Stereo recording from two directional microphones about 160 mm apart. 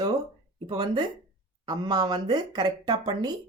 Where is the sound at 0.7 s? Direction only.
25° right (ahead or behind).